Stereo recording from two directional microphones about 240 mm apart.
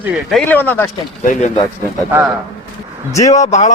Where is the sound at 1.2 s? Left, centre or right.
Left.